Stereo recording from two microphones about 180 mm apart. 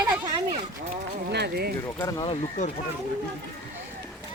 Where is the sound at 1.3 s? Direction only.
65° right (ahead or behind).